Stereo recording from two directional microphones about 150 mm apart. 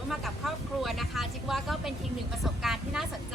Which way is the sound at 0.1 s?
Centre (ahead or behind).